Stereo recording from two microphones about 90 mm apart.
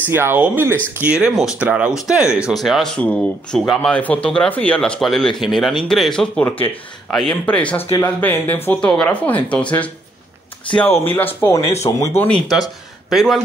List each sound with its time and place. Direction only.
0.1 s speech: 25° right (ahead or behind)
1.0 s speech: 10° right (ahead or behind)
2.5 s speech: centre (ahead or behind)
3.0 s speech: 15° left (ahead or behind)
10.9 s speech: 20° left (ahead or behind)
11.5 s speech: 35° left (ahead or behind)
12.4 s speech: centre (ahead or behind)